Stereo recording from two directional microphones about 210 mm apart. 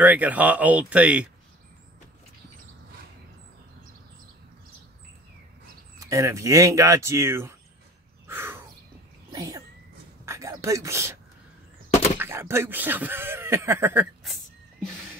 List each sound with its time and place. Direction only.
0.0 s speech: 5° right (ahead or behind)
5.9 s speech: 15° right (ahead or behind)
8.3 s a sound: 10° right (ahead or behind)
9.3 s sneeze: 20° right (ahead or behind)
10.2 s a sound: 15° right (ahead or behind)
12.2 s speech: 10° right (ahead or behind)